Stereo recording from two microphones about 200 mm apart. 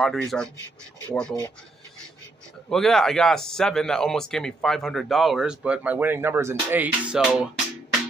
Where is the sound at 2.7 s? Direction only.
Centre (ahead or behind).